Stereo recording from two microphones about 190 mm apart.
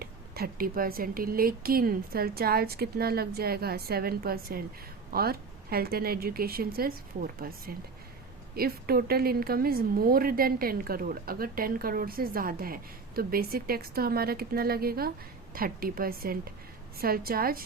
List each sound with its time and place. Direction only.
0.0 s speech: 50° right (ahead or behind)